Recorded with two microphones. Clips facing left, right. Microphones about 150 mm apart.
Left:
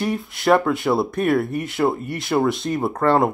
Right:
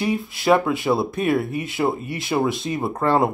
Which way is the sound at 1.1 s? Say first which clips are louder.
Left 2 dB; 25° right (ahead or behind).